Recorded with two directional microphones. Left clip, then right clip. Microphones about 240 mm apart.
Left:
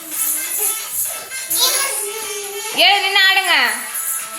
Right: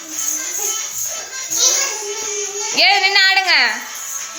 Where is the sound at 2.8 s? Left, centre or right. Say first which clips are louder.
Even; centre.